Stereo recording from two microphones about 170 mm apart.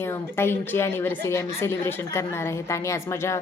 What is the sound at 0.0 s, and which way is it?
A woman's voice, 15° left (ahead or behind).